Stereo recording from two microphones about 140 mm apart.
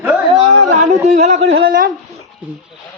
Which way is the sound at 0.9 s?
55° right (ahead or behind).